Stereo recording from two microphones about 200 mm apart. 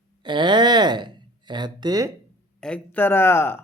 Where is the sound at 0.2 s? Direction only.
25° right (ahead or behind).